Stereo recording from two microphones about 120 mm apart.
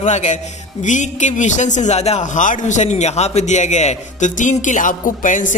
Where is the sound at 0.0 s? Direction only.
85° left.